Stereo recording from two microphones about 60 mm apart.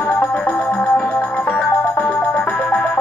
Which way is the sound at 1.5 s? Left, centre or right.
Left.